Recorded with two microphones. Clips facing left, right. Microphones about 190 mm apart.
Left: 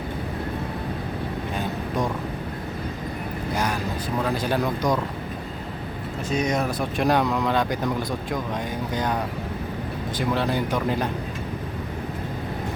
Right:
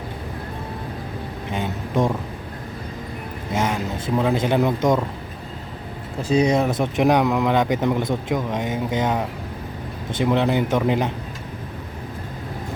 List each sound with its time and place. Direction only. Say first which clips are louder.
2.0 s speech: right 6 dB; 25° right (ahead or behind)
3.5 s speech: right 4 dB; 25° right (ahead or behind)
6.2 s speech: right 6 dB; 30° right (ahead or behind)